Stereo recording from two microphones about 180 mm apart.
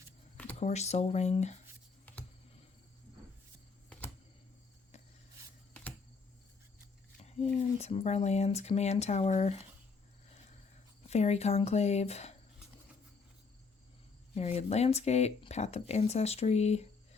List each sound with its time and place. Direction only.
0.6 s speech: 40° left (ahead or behind)
2.1 s computer keyboard: 10° left (ahead or behind)
7.2 s speech: 40° left (ahead or behind)
11.1 s speech: 35° left (ahead or behind)
14.3 s speech: 35° left (ahead or behind)